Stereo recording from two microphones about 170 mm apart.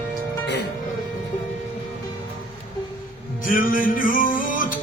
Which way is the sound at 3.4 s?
55° left (ahead or behind).